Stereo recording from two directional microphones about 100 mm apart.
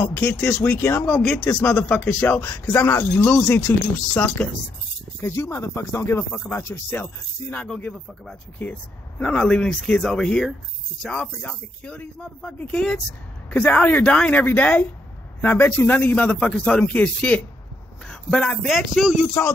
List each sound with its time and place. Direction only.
0.0 s speech: 20° left (ahead or behind)
1.0 s speech: 10° left (ahead or behind); by 3.1 s 25° left (ahead or behind)
3.2 s speech: 15° left (ahead or behind)
5.2 s speech: 25° left (ahead or behind)
7.6 s speech: 5° left (ahead or behind)
18.8 s speech: 5° right (ahead or behind)